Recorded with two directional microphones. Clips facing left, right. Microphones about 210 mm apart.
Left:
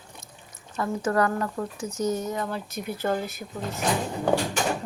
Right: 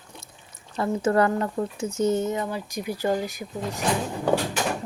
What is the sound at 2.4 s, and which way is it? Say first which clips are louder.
A woman's voice: right 2 dB; 10° right (ahead or behind).